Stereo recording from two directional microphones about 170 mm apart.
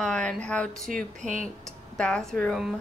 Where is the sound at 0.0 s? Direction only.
5° left (ahead or behind).